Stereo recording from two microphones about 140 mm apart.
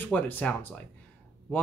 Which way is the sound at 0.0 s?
10° left (ahead or behind).